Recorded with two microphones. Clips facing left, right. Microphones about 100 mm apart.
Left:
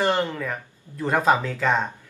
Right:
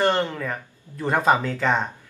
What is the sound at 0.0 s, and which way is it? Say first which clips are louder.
Speech: right 1 dB; centre (ahead or behind).